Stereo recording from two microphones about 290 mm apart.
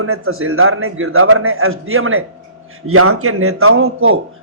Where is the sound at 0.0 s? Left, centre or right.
Right.